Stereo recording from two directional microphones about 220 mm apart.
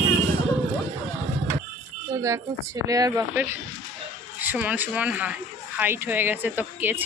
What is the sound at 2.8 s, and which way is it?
Speech, 15° right (ahead or behind).